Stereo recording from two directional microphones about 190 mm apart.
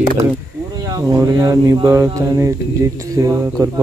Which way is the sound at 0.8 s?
20° right (ahead or behind).